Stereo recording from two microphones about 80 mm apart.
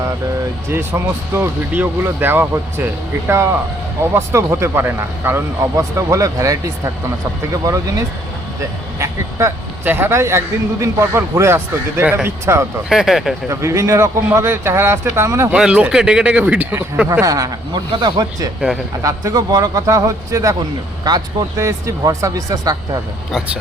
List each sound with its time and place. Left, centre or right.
0.7 s speech: right
6.0 s a man's voice: right
9.8 s speech: right
10.2 s speech: right
12.9 s speech: centre
13.5 s speech: right
15.5 s speech: centre
17.1 s a man's voice: right
17.9 s speech: right
19.0 s a man's voice: right
21.0 s speech: right
21.6 s a man's voice: right